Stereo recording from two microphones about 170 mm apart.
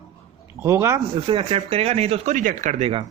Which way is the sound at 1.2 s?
30° right (ahead or behind).